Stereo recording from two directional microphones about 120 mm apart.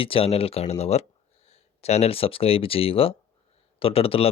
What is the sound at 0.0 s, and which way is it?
Speech, 50° left (ahead or behind).